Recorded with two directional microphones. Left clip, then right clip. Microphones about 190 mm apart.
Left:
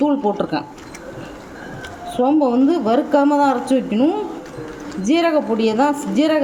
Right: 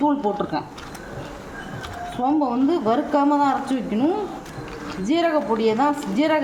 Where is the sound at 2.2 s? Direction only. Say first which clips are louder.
Left 5 dB; 25° left (ahead or behind).